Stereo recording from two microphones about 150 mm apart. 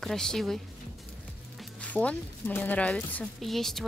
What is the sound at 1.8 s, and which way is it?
Speech, 10° left (ahead or behind).